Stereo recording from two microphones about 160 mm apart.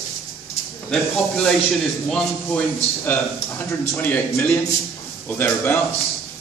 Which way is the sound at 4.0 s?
10° left (ahead or behind).